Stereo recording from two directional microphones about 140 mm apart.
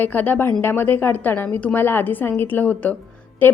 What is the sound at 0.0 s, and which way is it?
Speech, 10° left (ahead or behind).